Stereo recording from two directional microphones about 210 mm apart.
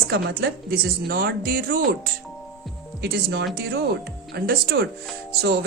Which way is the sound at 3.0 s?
50° right (ahead or behind).